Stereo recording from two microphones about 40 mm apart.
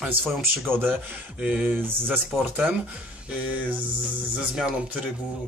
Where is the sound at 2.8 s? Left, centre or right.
Right.